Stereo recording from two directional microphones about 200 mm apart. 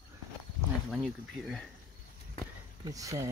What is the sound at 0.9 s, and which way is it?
Speech, centre (ahead or behind).